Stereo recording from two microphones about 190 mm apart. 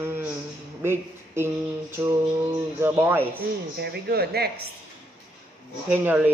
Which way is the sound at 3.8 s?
55° right (ahead or behind).